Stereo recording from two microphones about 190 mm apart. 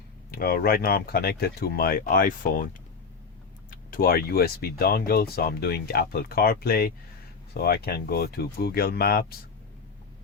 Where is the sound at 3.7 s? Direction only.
50° left (ahead or behind).